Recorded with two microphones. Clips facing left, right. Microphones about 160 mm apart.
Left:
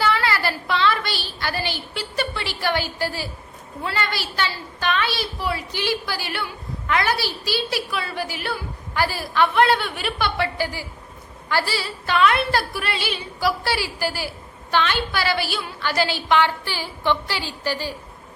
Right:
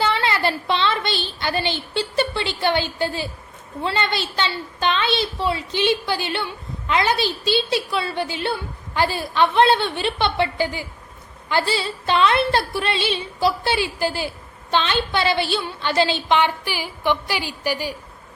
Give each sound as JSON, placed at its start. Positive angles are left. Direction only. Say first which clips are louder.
{"t": 0.0, "sound": "a woman's voice", "louder": "right 1 dB", "side_deg": -25}